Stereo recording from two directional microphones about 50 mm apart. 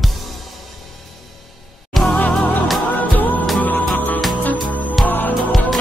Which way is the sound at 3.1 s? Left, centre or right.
Left.